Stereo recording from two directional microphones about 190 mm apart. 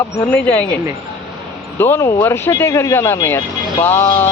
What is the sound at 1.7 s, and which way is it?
Speech, 10° left (ahead or behind).